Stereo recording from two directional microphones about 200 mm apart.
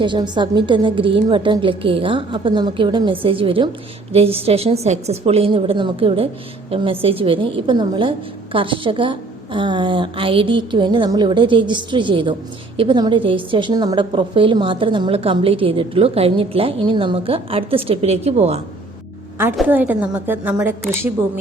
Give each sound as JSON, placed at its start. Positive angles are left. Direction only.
{"t": 0.0, "sound": "a woman's voice", "side_deg": -25}
{"t": 19.5, "sound": "a woman's voice", "side_deg": -5}